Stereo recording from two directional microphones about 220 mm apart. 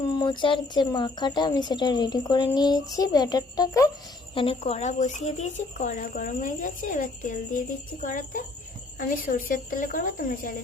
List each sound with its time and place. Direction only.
0.2 s speech: 20° left (ahead or behind)
4.4 s a woman's voice: 25° left (ahead or behind)